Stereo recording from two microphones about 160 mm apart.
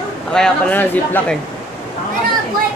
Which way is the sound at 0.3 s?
5° left (ahead or behind).